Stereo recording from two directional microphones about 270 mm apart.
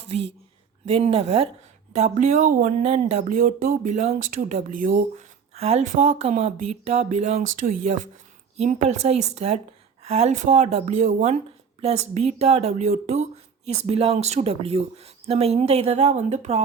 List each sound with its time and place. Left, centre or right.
0.0 s a woman's voice: right
8.5 s speech: right